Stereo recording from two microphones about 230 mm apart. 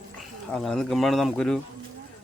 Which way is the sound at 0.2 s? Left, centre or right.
Centre.